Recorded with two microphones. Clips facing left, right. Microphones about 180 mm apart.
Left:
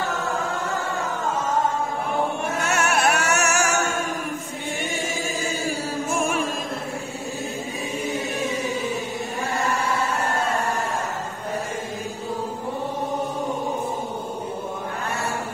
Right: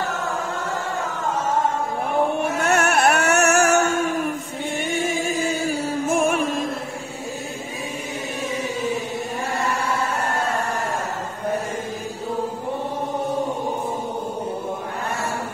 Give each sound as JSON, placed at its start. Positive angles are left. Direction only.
{"t": 2.7, "sound": "music", "side_deg": -55}